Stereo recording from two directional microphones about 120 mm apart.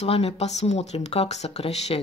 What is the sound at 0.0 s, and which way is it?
Speech, 55° left (ahead or behind).